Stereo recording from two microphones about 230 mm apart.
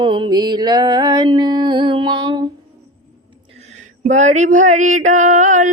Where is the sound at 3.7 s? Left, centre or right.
Right.